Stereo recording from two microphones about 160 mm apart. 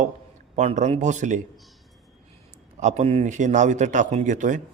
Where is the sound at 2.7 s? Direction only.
45° right (ahead or behind).